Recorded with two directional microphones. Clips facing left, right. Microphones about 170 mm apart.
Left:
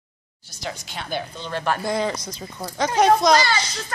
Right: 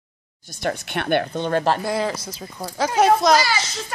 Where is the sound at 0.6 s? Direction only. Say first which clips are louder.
Right 7 dB; 60° right (ahead or behind).